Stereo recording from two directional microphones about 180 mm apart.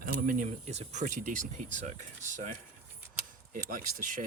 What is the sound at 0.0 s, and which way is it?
Speech, 50° right (ahead or behind).